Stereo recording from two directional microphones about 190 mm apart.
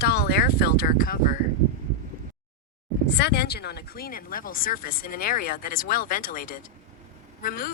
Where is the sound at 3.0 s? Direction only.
60° left (ahead or behind).